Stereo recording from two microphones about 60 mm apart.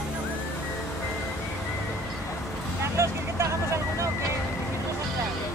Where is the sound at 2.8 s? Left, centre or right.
Right.